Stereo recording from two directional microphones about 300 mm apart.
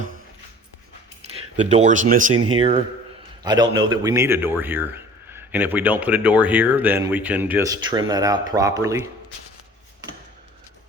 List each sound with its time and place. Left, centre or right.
1.5 s speech: right
2.3 s speech: right
2.6 s a man's voice: centre